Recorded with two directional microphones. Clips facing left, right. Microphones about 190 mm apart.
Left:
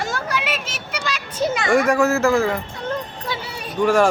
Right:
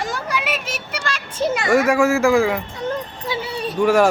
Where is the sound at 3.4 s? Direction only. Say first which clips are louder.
Right 7 dB; 30° right (ahead or behind).